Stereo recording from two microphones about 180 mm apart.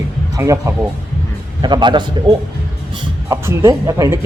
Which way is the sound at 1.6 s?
25° right (ahead or behind).